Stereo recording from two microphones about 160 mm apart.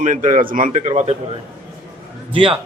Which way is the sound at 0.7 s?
45° right (ahead or behind).